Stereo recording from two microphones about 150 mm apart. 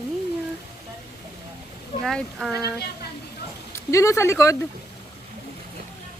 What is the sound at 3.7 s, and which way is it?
Speech, 20° left (ahead or behind).